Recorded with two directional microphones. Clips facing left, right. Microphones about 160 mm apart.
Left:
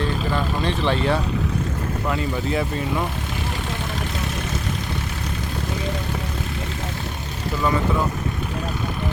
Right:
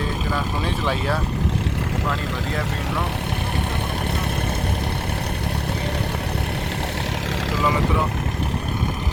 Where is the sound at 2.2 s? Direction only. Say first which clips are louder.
Left 3 dB; 90° right.